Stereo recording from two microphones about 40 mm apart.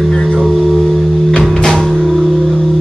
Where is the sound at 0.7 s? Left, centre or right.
Centre.